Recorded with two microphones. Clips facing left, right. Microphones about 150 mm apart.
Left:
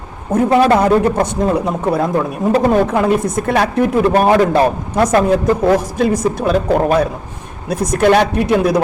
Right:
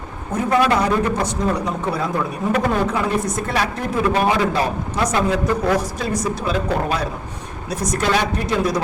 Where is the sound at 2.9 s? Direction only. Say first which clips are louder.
Left 6 dB; 55° left (ahead or behind).